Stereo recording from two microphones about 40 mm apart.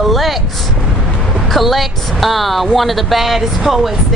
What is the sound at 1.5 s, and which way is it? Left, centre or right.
A woman's voice, centre.